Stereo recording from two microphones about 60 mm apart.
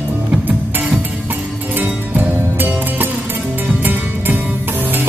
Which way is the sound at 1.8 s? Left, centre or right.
Right.